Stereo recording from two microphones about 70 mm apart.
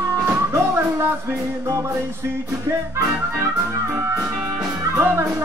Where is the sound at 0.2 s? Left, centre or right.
Right.